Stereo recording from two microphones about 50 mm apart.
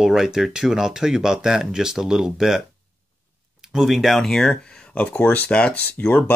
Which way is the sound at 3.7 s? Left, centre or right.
Centre.